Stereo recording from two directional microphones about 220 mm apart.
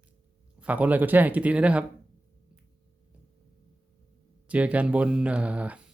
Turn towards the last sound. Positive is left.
turn(degrees=-5)  # may be behind; listen again after turning